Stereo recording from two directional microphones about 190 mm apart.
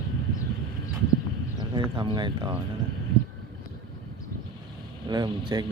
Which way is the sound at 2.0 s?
25° right (ahead or behind).